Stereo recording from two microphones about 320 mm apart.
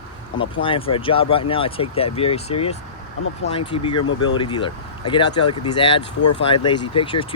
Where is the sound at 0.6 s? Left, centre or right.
Centre.